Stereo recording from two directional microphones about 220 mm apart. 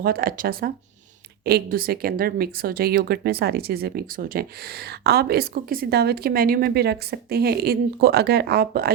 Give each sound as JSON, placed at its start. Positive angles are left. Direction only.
{"t": 0.0, "sound": "a woman's voice", "side_deg": -40}